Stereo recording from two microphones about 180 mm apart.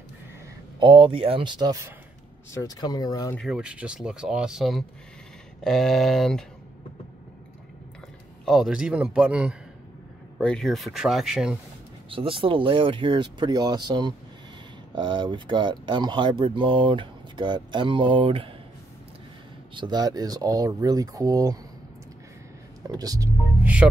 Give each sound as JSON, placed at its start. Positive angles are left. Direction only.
{"t": 0.7, "sound": "speech", "side_deg": -30}
{"t": 2.5, "sound": "speech", "side_deg": 20}
{"t": 3.3, "sound": "speech", "side_deg": -5}
{"t": 8.5, "sound": "speech", "side_deg": -5}
{"t": 12.1, "sound": "speech", "side_deg": -30}
{"t": 19.7, "sound": "speech", "side_deg": -25}
{"t": 22.8, "sound": "speech", "side_deg": -20}
{"t": 23.6, "sound": "speech", "side_deg": -5}